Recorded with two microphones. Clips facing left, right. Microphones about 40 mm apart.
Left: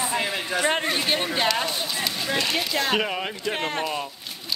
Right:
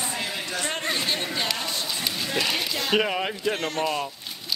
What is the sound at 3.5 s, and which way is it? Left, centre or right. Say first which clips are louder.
Speech: left 1 dB; left.